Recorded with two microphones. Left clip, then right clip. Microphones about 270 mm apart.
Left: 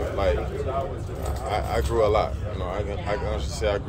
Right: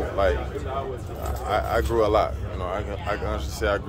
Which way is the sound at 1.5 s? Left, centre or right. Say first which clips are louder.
Right 2 dB; centre.